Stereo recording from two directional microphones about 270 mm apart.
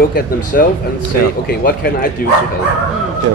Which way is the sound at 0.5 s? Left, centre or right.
Left.